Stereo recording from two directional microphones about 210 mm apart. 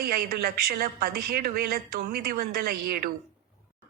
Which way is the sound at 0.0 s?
45° right (ahead or behind).